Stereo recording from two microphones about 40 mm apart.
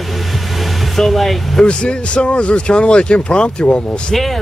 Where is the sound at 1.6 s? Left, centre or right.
Left.